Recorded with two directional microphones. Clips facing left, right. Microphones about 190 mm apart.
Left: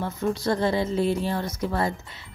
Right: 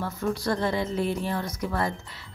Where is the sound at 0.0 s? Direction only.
25° left (ahead or behind).